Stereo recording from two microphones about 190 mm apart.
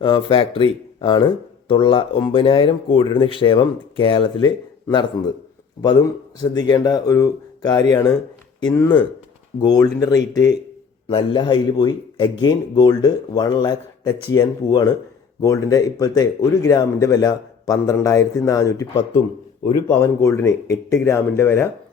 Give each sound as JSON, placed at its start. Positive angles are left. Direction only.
{"t": 0.0, "sound": "speech", "side_deg": 25}